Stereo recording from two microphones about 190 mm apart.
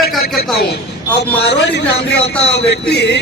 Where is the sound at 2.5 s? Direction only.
60° left (ahead or behind).